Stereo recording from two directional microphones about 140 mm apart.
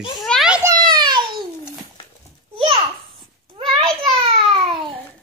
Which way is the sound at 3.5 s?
40° right (ahead or behind).